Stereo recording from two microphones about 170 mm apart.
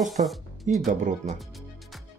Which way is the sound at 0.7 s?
50° right (ahead or behind).